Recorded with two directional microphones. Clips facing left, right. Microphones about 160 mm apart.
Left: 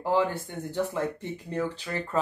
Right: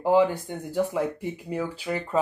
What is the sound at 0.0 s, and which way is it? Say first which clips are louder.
Speech: right 5 dB; 15° right (ahead or behind).